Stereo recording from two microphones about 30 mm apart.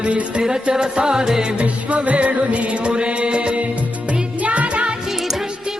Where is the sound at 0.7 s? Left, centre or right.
Right.